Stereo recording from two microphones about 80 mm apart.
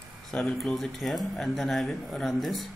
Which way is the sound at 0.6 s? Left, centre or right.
Centre.